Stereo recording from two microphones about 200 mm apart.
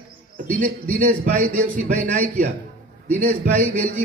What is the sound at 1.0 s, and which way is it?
Speech, 40° right (ahead or behind).